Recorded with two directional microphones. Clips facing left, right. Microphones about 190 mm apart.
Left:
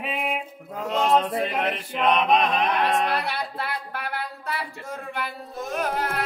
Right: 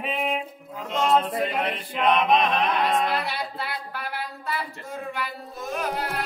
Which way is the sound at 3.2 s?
60° left (ahead or behind).